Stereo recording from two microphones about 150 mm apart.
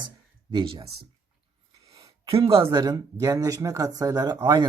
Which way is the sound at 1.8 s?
25° right (ahead or behind).